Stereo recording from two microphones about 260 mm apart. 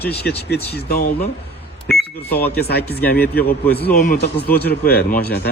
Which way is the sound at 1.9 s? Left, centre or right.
Centre.